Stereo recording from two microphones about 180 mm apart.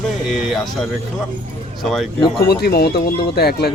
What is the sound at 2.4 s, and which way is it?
Speech, 60° left (ahead or behind).